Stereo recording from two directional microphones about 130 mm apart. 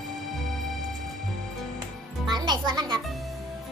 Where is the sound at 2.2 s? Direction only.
35° right (ahead or behind).